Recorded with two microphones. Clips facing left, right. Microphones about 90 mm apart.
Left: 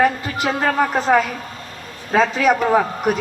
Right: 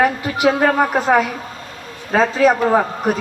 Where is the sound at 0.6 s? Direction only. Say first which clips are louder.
Right 3 dB; 40° right (ahead or behind).